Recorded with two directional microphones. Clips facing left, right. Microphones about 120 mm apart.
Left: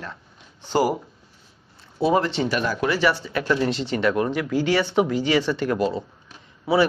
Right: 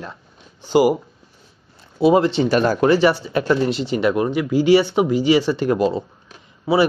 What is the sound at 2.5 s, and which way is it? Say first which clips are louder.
Speech: right 8 dB; 40° right (ahead or behind).